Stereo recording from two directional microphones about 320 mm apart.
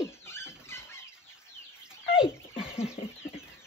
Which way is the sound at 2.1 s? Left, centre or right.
Centre.